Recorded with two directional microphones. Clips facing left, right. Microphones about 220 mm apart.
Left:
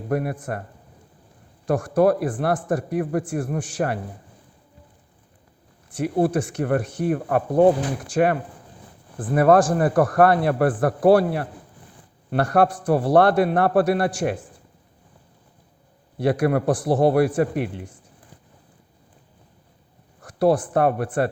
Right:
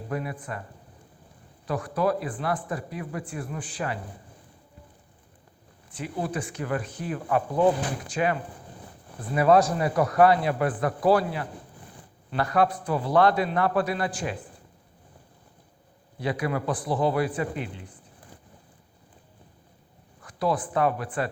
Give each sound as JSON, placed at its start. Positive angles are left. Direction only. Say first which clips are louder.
{"t": 0.1, "sound": "a man's voice", "louder": "left 8 dB", "side_deg": 65}
{"t": 1.6, "sound": "a man's voice", "louder": "left 7 dB", "side_deg": 45}
{"t": 2.0, "sound": "a man's voice", "louder": "left 8 dB", "side_deg": 65}
{"t": 3.0, "sound": "a man's voice", "louder": "left 10 dB", "side_deg": 50}
{"t": 3.2, "sound": "a man's voice", "louder": "left 8 dB", "side_deg": 75}
{"t": 5.9, "sound": "a man's voice", "louder": "left 10 dB", "side_deg": 70}
{"t": 7.1, "sound": "a man's voice", "louder": "left 4 dB", "side_deg": 50}
{"t": 12.3, "sound": "a man's voice", "louder": "left 5 dB", "side_deg": 70}
{"t": 16.4, "sound": "a man's voice", "louder": "left 8 dB", "side_deg": 65}
{"t": 20.2, "sound": "speech", "louder": "left 8 dB", "side_deg": 70}